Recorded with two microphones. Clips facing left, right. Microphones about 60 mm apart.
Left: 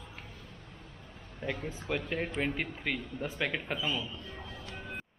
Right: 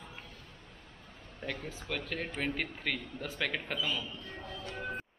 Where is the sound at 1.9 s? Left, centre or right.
Centre.